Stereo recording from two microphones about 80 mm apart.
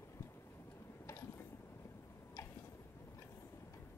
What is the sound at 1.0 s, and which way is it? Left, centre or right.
Mechanisms, left.